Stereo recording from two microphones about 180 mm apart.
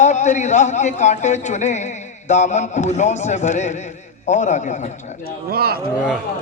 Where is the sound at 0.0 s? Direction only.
40° left (ahead or behind).